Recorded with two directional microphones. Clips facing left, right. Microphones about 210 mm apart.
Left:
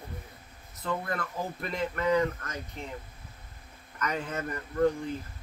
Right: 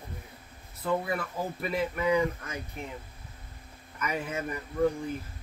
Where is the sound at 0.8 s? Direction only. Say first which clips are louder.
Right 3 dB; 10° right (ahead or behind).